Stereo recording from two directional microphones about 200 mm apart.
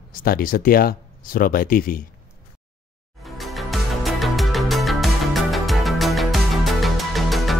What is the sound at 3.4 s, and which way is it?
Music, centre (ahead or behind).